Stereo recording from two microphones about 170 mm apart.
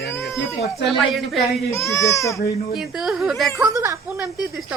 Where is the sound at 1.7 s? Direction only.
15° left (ahead or behind).